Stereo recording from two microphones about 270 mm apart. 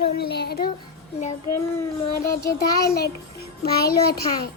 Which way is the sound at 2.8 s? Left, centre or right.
Left.